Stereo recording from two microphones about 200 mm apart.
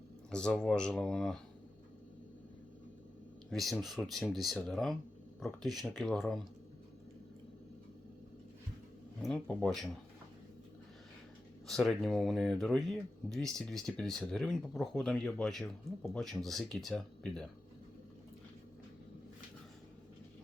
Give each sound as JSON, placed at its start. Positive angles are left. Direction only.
{"t": 0.3, "sound": "speech", "side_deg": 5}
{"t": 3.5, "sound": "speech", "side_deg": 0}
{"t": 9.2, "sound": "speech", "side_deg": 5}
{"t": 11.7, "sound": "speech", "side_deg": 0}